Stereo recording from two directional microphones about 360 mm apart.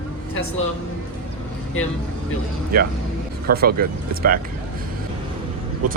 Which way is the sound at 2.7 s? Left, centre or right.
Right.